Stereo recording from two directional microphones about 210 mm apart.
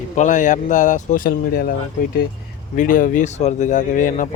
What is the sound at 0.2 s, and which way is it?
Speech, 35° left (ahead or behind).